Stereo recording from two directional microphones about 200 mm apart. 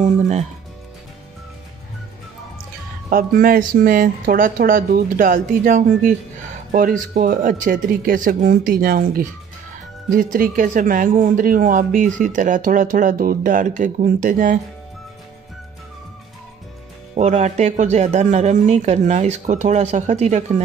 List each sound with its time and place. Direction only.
0.0 s speech: 35° right (ahead or behind)
3.1 s speech: 45° right (ahead or behind)
17.1 s speech: 35° right (ahead or behind)